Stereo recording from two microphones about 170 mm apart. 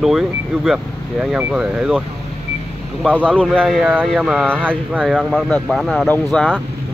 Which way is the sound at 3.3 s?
5° left (ahead or behind).